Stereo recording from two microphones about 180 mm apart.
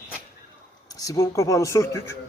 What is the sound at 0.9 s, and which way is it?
Speech, 20° left (ahead or behind).